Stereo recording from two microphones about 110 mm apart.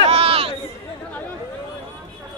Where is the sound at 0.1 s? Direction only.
60° right (ahead or behind).